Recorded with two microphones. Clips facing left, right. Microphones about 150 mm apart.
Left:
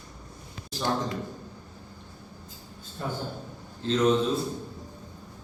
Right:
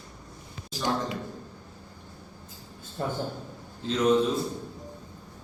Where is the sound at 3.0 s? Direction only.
45° right (ahead or behind).